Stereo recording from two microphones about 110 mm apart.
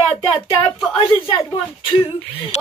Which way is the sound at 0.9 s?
55° left (ahead or behind).